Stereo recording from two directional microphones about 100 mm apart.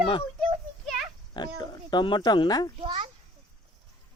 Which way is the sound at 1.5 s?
40° left (ahead or behind).